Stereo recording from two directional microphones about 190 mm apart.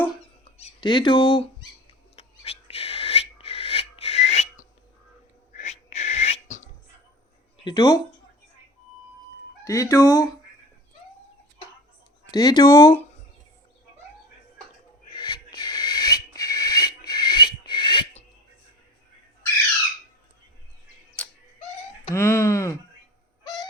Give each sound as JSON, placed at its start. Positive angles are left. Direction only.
{"t": 0.6, "sound": "speech", "side_deg": 25}
{"t": 2.1, "sound": "owl", "side_deg": 30}
{"t": 5.5, "sound": "a sound", "side_deg": 35}
{"t": 7.6, "sound": "speech", "side_deg": 20}
{"t": 9.6, "sound": "wail", "side_deg": 15}
{"t": 12.3, "sound": "speech", "side_deg": 20}
{"t": 15.1, "sound": "owl", "side_deg": 25}
{"t": 21.2, "sound": "bird", "side_deg": 5}
{"t": 22.1, "sound": "wail", "side_deg": 15}
{"t": 23.4, "sound": "owl", "side_deg": 20}